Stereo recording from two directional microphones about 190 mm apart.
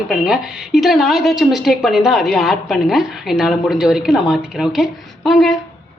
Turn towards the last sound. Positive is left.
turn(degrees=0)  # may be behind; listen again after turning